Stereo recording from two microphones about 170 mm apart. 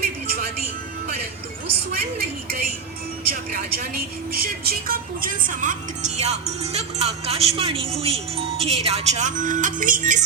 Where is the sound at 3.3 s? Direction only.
60° right (ahead or behind).